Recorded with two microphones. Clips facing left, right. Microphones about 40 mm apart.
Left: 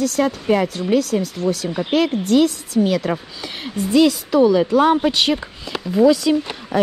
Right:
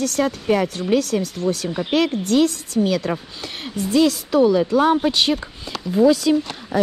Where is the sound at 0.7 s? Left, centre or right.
Right.